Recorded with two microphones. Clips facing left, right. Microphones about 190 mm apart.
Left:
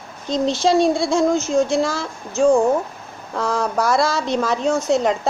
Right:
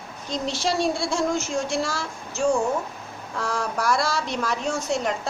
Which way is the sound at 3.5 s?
20° left (ahead or behind).